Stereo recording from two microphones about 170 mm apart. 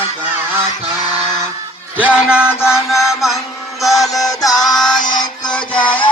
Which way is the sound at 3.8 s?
Centre (ahead or behind).